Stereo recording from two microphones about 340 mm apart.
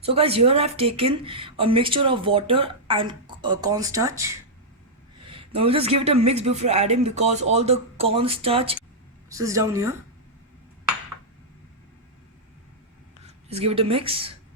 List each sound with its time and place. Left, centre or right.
0.0 s speech: centre
13.5 s speech: centre